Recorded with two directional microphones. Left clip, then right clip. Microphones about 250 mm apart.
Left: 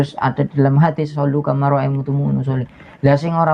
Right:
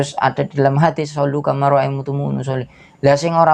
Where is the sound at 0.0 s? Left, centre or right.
Right.